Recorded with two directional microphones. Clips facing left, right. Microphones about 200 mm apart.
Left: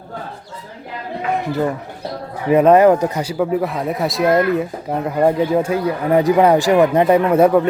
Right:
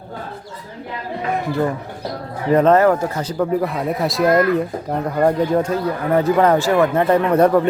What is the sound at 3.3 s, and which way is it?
Speech, 5° left (ahead or behind).